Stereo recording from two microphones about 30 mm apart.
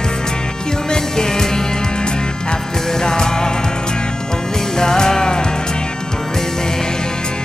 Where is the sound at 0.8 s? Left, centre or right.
Left.